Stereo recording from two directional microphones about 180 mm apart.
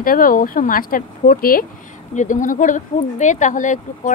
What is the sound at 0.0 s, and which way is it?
Speech, 50° left (ahead or behind).